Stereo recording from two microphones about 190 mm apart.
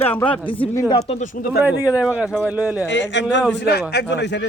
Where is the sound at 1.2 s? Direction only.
50° left (ahead or behind).